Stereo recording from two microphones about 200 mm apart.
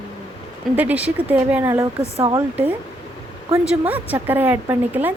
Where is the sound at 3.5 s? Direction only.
5° right (ahead or behind).